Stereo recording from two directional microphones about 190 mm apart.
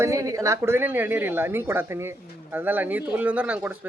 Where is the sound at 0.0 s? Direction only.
15° right (ahead or behind).